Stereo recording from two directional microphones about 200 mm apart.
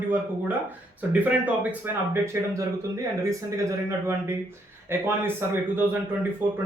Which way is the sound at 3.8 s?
15° right (ahead or behind).